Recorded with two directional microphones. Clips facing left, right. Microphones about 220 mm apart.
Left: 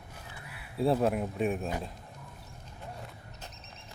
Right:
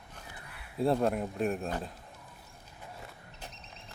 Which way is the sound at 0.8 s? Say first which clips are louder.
Left 1 dB; centre (ahead or behind).